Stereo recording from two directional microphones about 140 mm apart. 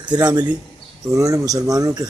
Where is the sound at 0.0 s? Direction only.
30° right (ahead or behind).